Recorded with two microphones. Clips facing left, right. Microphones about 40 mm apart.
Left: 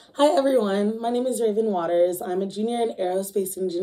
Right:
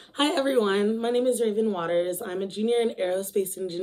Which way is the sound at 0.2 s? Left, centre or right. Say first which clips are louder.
Left 4 dB; right.